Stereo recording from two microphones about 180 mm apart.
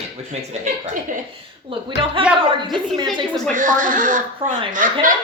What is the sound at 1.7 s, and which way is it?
A woman's voice, 30° right (ahead or behind).